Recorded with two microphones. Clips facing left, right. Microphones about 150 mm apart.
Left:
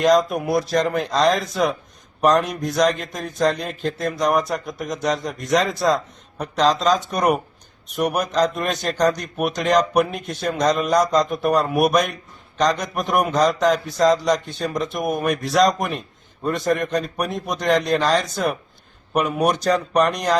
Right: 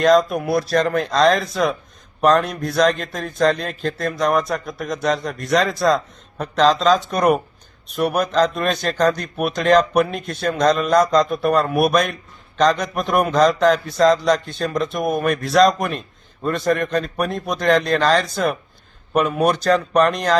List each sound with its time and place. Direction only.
0.0 s a man's voice: 15° left (ahead or behind)
17.9 s a man's voice: 5° left (ahead or behind)